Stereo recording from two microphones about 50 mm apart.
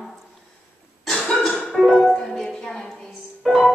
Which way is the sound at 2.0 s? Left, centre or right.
Centre.